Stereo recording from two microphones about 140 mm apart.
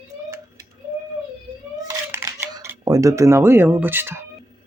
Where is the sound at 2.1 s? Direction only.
15° right (ahead or behind).